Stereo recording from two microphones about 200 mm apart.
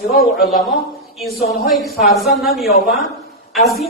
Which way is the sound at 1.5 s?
Centre (ahead or behind).